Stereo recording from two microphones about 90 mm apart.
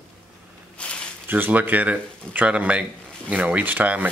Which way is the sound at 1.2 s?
20° right (ahead or behind).